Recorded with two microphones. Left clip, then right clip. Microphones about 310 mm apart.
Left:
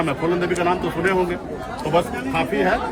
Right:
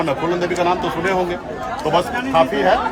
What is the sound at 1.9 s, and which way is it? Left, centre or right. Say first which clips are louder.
Speech: right 4 dB; centre.